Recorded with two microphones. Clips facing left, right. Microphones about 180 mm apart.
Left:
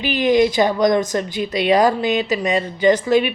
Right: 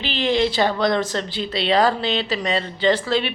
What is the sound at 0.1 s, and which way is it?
Speech, 25° right (ahead or behind).